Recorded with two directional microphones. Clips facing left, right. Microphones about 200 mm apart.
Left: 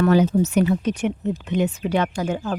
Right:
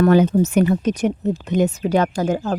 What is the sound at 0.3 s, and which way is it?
Speech, 50° right (ahead or behind).